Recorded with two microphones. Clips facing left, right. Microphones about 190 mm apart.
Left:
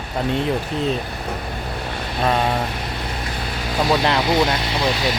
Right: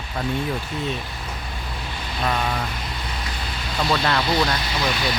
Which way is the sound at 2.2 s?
30° left (ahead or behind).